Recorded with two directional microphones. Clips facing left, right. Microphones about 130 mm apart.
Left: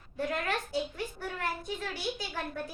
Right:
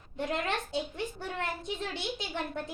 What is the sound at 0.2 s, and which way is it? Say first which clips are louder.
A child's voice: even; 20° right (ahead or behind).